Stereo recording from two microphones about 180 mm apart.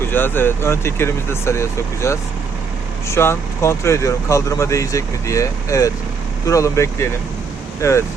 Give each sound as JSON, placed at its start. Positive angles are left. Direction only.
{"t": 0.1, "sound": "speech", "side_deg": 10}